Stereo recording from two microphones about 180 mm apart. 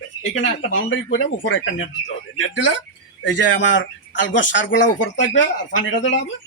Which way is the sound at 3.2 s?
90° left.